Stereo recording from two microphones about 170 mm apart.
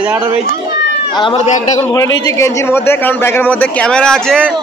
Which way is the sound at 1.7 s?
20° left (ahead or behind).